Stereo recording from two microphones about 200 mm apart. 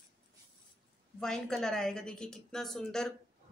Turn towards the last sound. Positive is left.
turn(degrees=5)  # may be behind; listen again after turning